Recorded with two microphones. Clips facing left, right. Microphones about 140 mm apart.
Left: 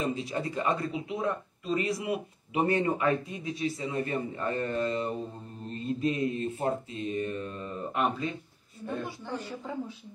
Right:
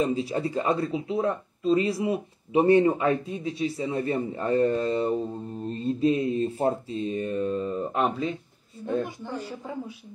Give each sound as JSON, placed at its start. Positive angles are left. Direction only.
{"t": 0.0, "sound": "speech", "side_deg": -30}
{"t": 8.7, "sound": "a woman's voice", "side_deg": -15}